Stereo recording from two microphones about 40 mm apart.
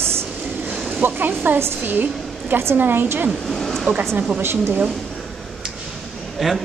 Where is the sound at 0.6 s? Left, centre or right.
Right.